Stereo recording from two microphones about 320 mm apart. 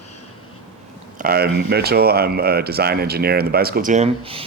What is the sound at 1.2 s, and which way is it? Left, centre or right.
Speech, right.